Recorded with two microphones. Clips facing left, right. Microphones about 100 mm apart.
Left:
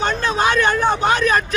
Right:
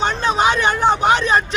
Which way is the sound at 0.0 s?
20° right (ahead or behind).